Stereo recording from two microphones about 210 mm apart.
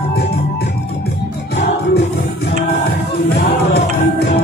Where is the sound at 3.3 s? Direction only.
50° left (ahead or behind).